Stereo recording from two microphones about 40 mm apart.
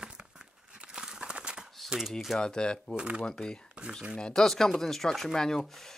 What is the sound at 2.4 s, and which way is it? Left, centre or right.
Speech, left.